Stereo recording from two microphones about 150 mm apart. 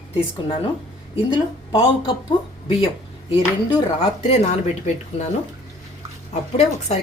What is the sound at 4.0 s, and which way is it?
Speech, 45° left (ahead or behind).